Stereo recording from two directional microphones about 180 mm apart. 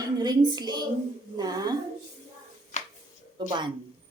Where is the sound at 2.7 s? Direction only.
40° left (ahead or behind).